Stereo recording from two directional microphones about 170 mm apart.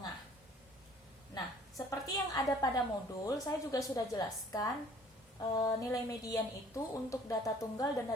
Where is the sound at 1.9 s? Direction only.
20° left (ahead or behind).